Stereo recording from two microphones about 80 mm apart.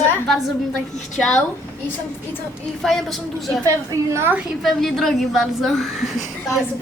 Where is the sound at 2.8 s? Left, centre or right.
Centre.